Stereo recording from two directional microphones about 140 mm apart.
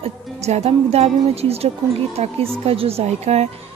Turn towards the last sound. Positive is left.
turn(degrees=-50)  # may be behind; listen again after turning